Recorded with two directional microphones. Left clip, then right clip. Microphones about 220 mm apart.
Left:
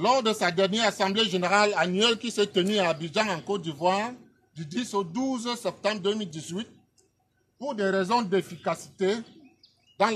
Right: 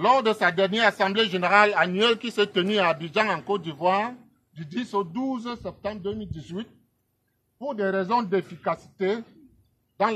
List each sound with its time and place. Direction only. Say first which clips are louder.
0.0 s speech: right 3 dB; 20° left (ahead or behind)